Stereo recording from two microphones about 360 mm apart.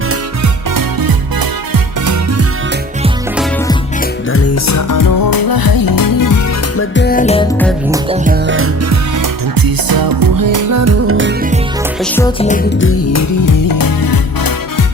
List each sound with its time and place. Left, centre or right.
0.7 s music: right
4.3 s music: left
6.7 s music: left
7.9 s music: centre
8.2 s music: right
9.6 s music: right
12.1 s music: centre
13.1 s music: left